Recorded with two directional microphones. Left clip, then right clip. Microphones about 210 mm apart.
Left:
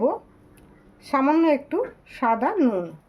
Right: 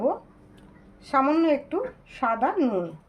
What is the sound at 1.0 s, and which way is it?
Speech, 40° left (ahead or behind).